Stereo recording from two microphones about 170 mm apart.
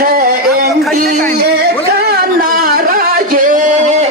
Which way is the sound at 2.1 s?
60° right (ahead or behind).